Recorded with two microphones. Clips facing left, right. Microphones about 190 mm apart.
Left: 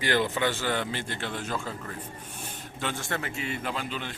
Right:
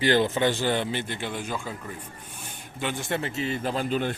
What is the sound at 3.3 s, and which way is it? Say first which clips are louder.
Speech: right 5 dB; 35° right (ahead or behind).